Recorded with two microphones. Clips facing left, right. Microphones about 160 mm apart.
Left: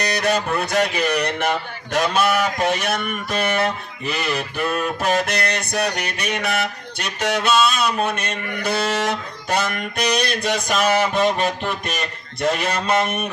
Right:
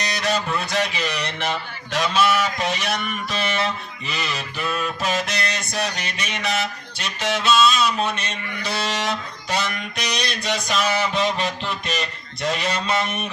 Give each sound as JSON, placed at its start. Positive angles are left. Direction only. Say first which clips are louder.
{"t": 0.0, "sound": "speech", "louder": "left 3 dB", "side_deg": 55}